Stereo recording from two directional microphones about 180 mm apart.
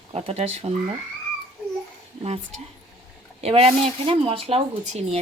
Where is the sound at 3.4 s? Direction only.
35° right (ahead or behind).